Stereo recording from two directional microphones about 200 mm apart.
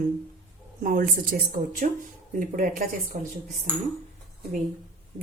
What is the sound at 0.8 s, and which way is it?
Speech, 45° right (ahead or behind).